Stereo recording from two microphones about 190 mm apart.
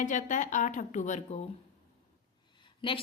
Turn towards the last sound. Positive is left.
turn(degrees=30)  # may be behind; listen again after turning